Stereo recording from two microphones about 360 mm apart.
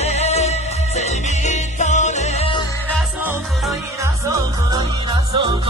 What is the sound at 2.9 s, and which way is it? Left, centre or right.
Music, centre.